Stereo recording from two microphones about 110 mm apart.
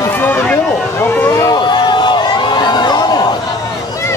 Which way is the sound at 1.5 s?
40° left (ahead or behind).